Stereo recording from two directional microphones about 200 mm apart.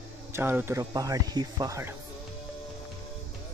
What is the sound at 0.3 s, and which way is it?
Speech, 10° right (ahead or behind).